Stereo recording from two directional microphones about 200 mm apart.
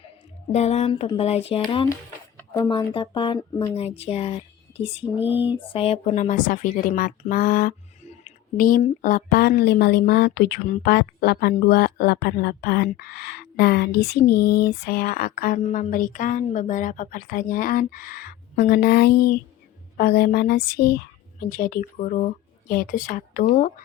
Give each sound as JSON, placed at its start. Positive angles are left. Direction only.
{"t": 0.5, "sound": "speech", "side_deg": 30}
{"t": 2.4, "sound": "a woman's voice", "side_deg": 20}